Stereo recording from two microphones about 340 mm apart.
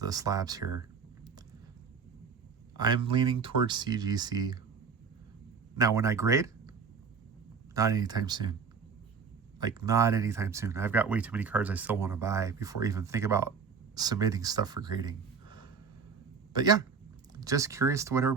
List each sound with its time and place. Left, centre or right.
0.0 s speech: centre
2.7 s a man's voice: centre
5.7 s speech: centre
7.7 s speech: centre
9.6 s speech: centre
16.5 s speech: centre